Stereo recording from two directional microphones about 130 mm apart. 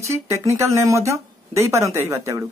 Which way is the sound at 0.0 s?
25° right (ahead or behind).